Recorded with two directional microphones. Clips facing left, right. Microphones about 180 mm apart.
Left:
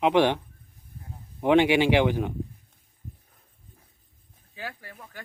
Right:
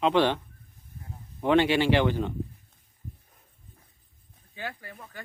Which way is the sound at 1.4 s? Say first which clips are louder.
Left 2 dB; 15° left (ahead or behind).